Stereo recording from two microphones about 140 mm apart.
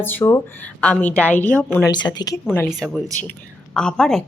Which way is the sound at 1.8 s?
30° left (ahead or behind).